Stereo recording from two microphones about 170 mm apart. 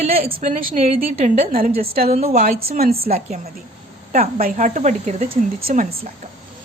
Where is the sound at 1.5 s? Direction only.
55° right (ahead or behind).